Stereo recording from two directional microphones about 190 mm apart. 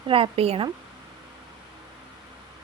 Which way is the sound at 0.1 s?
30° right (ahead or behind).